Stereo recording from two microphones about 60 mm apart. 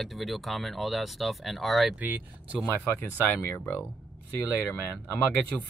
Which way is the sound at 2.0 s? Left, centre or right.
Right.